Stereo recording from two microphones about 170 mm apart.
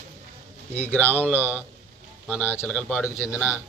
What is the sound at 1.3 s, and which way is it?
A man's voice, 10° right (ahead or behind).